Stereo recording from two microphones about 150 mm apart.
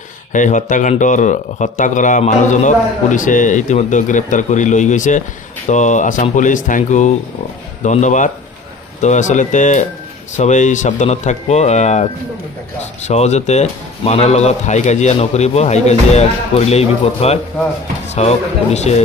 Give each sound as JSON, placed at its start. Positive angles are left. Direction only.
{"t": 0.3, "sound": "speech", "side_deg": 55}